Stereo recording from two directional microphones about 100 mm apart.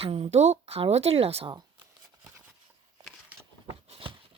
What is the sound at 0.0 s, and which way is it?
A woman's voice, 90° right.